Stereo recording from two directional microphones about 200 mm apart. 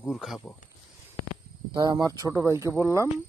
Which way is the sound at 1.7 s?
20° right (ahead or behind).